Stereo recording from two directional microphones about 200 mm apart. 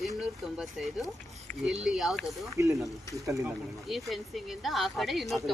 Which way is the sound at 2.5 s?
15° right (ahead or behind).